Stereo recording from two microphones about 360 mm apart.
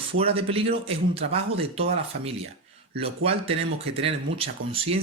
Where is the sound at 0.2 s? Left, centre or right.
Centre.